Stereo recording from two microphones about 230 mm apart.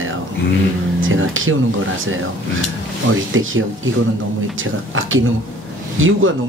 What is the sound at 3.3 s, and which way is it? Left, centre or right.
Speech, right.